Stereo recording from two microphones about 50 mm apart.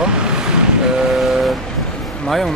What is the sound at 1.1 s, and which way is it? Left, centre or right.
Speech, centre.